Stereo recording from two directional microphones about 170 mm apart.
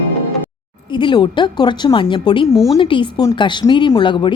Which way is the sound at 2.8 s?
30° left (ahead or behind).